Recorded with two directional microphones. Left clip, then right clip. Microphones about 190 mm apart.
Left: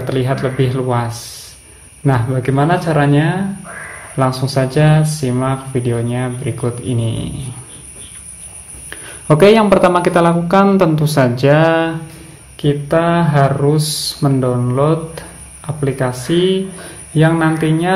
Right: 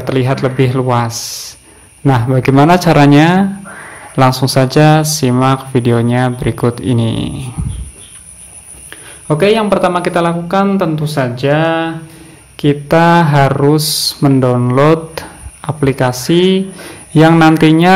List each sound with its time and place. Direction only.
0.0 s speech: 25° right (ahead or behind)
8.9 s speech: 5° left (ahead or behind)
12.5 s speech: 30° right (ahead or behind)